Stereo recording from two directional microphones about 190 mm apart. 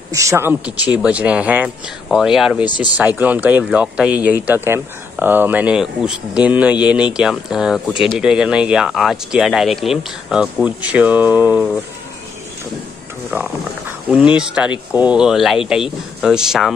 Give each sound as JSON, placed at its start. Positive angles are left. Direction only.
{"t": 0.1, "sound": "speech", "side_deg": -15}
{"t": 2.6, "sound": "speech", "side_deg": 25}
{"t": 3.2, "sound": "speech", "side_deg": -10}
{"t": 13.3, "sound": "speech", "side_deg": -5}